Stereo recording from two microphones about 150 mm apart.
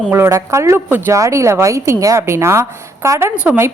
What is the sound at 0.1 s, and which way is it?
A woman's voice, 15° right (ahead or behind).